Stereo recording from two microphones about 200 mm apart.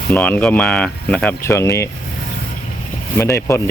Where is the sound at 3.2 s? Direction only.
15° left (ahead or behind).